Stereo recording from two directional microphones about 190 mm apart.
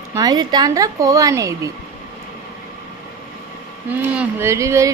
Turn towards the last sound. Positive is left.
turn(degrees=-15)  # may be behind; listen again after turning